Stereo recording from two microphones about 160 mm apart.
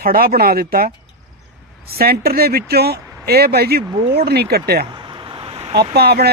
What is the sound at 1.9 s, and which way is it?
Speech, 75° right (ahead or behind).